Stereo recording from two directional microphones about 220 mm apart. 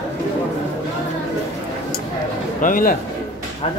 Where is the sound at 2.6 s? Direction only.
40° left (ahead or behind).